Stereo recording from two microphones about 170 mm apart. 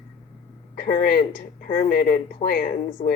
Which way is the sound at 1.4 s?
55° left (ahead or behind).